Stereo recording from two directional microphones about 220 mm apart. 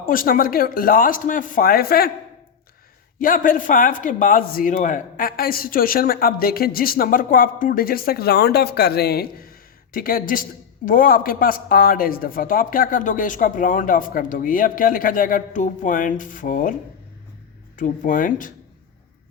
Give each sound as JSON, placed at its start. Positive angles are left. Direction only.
{"t": 0.0, "sound": "a man's voice", "side_deg": 40}
{"t": 3.2, "sound": "a man's voice", "side_deg": 40}
{"t": 17.7, "sound": "a man's voice", "side_deg": 35}